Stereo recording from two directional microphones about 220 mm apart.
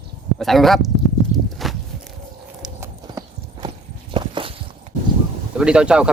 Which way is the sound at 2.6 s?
15° right (ahead or behind).